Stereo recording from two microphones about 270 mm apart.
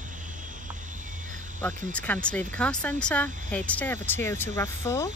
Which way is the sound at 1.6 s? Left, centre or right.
Centre.